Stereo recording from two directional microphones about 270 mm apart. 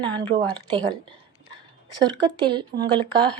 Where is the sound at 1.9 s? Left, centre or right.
Centre.